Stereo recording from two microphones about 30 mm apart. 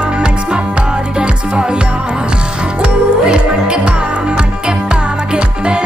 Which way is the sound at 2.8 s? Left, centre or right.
Right.